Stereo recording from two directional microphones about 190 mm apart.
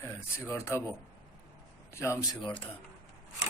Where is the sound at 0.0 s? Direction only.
15° left (ahead or behind).